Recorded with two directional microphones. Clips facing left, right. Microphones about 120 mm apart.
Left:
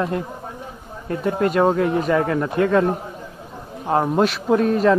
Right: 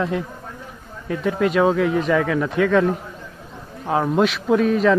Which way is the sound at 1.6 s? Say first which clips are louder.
Even; 5° left (ahead or behind).